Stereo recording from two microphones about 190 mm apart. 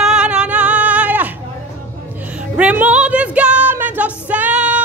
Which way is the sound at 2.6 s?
5° right (ahead or behind).